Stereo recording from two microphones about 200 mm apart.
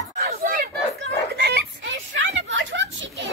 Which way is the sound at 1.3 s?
55° right (ahead or behind).